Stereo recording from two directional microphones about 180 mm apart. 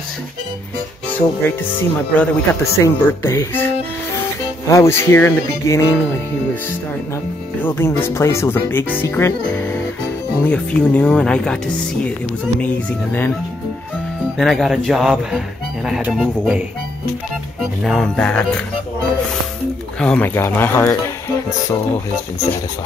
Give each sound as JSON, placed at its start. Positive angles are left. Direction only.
{"t": 1.4, "sound": "speech", "side_deg": 10}
{"t": 4.6, "sound": "speech", "side_deg": 15}
{"t": 7.6, "sound": "speech", "side_deg": 10}
{"t": 14.4, "sound": "speech", "side_deg": 0}
{"t": 17.8, "sound": "speech", "side_deg": 0}
{"t": 20.0, "sound": "speech", "side_deg": 5}